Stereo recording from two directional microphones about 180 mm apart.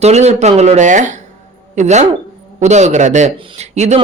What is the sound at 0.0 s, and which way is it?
Speech, 35° right (ahead or behind).